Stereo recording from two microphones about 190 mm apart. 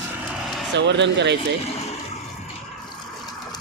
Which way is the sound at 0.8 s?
65° right (ahead or behind).